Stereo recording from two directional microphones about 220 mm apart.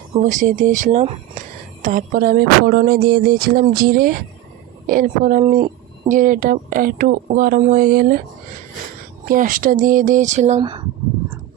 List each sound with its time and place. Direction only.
0.2 s speech: 35° right (ahead or behind)
9.2 s speech: 40° right (ahead or behind)
10.6 s speech: 20° right (ahead or behind)